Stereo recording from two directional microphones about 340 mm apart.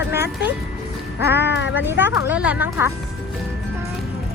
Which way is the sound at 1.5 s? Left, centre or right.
Left.